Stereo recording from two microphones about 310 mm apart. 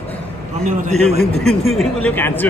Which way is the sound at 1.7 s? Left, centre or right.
Centre.